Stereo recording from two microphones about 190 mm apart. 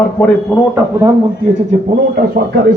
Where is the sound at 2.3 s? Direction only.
55° right (ahead or behind).